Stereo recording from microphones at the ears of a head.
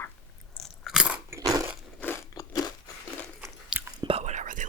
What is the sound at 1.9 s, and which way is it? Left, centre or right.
Crunch, left.